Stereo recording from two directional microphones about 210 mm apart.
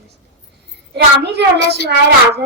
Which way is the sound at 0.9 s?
55° right (ahead or behind).